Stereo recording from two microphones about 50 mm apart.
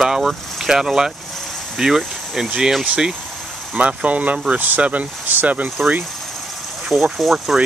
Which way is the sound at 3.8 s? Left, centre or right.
Right.